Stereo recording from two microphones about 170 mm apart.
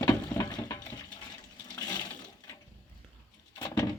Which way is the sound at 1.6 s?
20° left (ahead or behind).